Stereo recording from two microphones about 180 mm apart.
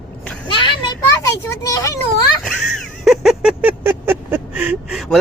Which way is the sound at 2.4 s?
Centre (ahead or behind).